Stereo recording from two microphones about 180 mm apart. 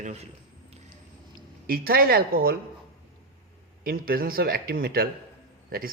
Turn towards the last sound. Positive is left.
turn(degrees=-55)  # may be behind; listen again after turning